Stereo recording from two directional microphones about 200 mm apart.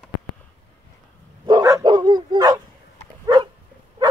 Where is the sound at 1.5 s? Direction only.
20° right (ahead or behind).